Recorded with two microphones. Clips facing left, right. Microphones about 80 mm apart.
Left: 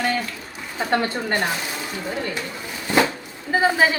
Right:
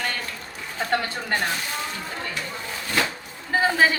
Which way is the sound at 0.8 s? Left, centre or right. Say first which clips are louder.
Left 3 dB; centre.